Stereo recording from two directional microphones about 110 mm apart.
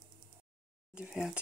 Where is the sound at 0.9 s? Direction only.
5° right (ahead or behind).